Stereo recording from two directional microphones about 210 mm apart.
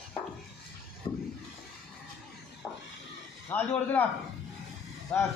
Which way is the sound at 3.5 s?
10° left (ahead or behind).